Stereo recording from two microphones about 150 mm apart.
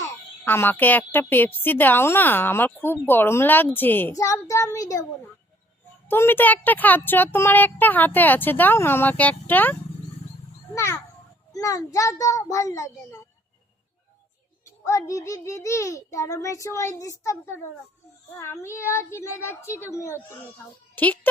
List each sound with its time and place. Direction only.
0.0 s a woman's voice: 15° left (ahead or behind)
6.1 s a woman's voice: 15° left (ahead or behind)
10.8 s a child's voice: 20° left (ahead or behind)
14.6 s a child's voice: 20° left (ahead or behind)